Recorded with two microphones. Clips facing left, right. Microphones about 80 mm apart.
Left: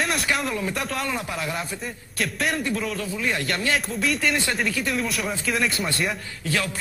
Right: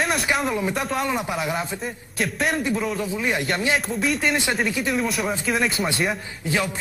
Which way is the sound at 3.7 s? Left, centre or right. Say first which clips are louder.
Right 2 dB; centre.